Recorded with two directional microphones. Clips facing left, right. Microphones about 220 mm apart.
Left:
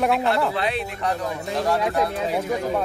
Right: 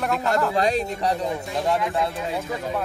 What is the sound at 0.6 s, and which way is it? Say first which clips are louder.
Speech: right 4 dB; 45° right (ahead or behind).